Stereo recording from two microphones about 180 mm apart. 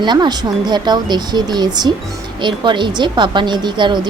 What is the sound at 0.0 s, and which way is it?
A woman's voice, 25° right (ahead or behind).